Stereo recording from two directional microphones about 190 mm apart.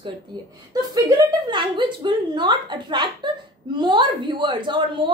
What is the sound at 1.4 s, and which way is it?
Speech, 25° right (ahead or behind).